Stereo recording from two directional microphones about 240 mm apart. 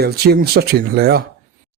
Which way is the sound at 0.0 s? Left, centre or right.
Right.